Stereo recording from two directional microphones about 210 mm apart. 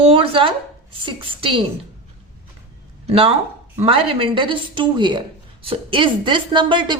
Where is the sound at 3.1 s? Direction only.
25° right (ahead or behind).